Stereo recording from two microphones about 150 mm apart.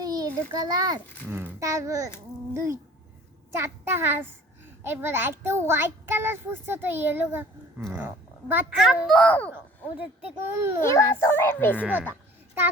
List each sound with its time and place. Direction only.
0.0 s a sound: 25° right (ahead or behind)
0.6 s a child's voice: 25° right (ahead or behind)
8.8 s a child's voice: centre (ahead or behind)
10.0 s a child's voice: 10° right (ahead or behind)
10.8 s a child's voice: 15° left (ahead or behind)